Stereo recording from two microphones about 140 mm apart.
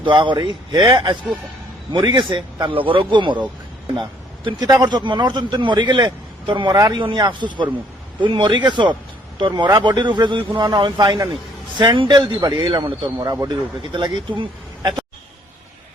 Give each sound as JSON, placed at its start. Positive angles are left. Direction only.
{"t": 0.0, "sound": "speech", "side_deg": -35}
{"t": 4.4, "sound": "speech", "side_deg": -30}